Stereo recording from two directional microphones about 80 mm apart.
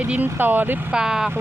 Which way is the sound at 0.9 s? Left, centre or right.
Centre.